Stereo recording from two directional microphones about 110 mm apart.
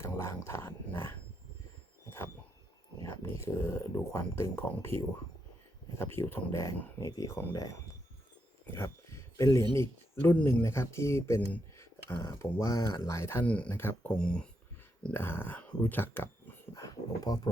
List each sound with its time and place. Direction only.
0.0 s speech: 25° left (ahead or behind)
2.0 s heart sounds: 25° left (ahead or behind)
3.0 s speech: 25° left (ahead or behind)
8.6 s a sound: 25° left (ahead or behind)
9.7 s speech: 20° left (ahead or behind)
13.4 s speech: 10° left (ahead or behind)
14.1 s speech: 10° left (ahead or behind)
15.1 s speech: 20° left (ahead or behind)
16.7 s speech: 30° left (ahead or behind)